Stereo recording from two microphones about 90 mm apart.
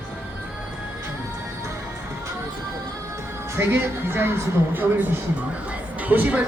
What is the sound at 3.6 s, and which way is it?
Speech, 25° right (ahead or behind).